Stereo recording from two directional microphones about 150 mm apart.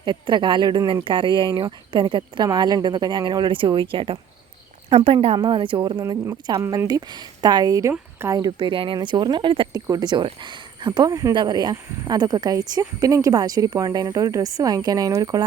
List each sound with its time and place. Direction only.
0.0 s speech: 30° right (ahead or behind)
8.4 s speech: 35° right (ahead or behind)